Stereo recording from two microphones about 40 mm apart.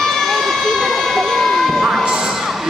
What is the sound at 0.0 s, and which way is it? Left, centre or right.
Emergency vehicle, centre.